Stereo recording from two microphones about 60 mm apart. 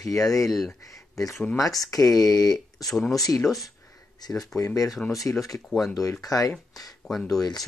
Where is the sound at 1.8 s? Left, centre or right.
Left.